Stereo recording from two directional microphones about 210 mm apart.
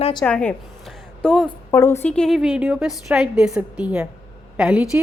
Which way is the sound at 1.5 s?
15° left (ahead or behind).